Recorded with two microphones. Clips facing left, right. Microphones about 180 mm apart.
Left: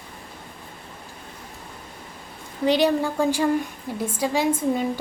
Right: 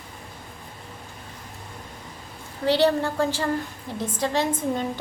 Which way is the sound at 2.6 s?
15° left (ahead or behind).